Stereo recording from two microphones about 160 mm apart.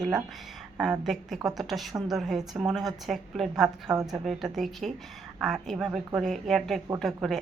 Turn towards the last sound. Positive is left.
turn(degrees=0)  # may be behind; listen again after turning